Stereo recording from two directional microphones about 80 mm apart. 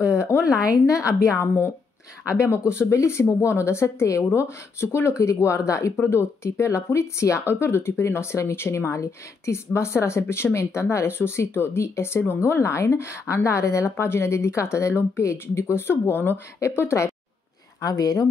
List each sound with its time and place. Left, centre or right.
0.3 s a sound: left
0.8 s a woman's voice: left
17.7 s speech: left